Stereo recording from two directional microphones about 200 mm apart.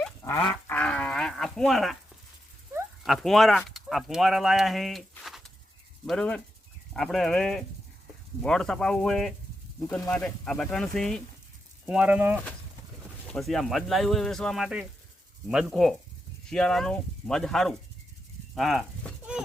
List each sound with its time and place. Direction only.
0.2 s livestock: 20° left (ahead or behind)
0.7 s livestock: 5° left (ahead or behind)
3.0 s speech: centre (ahead or behind)
18.5 s a sound: centre (ahead or behind)